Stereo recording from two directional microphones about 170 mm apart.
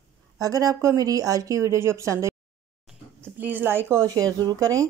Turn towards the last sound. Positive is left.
turn(degrees=-20)  # may be behind; listen again after turning